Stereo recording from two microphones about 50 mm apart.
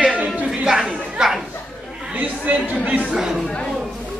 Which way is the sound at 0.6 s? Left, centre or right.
Centre.